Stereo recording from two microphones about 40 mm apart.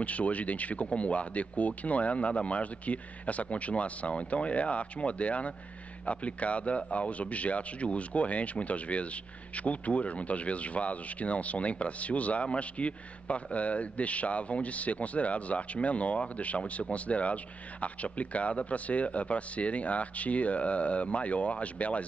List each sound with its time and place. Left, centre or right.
0.0 s speech: left